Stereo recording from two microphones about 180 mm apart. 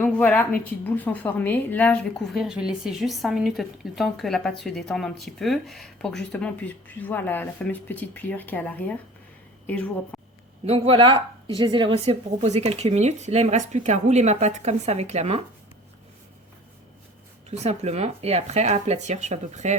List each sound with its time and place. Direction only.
0.0 s a woman's voice: 10° left (ahead or behind)
10.7 s speech: 30° right (ahead or behind)
17.5 s speech: 35° right (ahead or behind)